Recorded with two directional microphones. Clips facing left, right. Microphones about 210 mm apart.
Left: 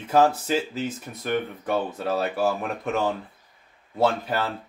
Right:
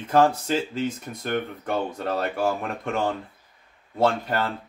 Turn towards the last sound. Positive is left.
turn(degrees=5)  # may be behind; listen again after turning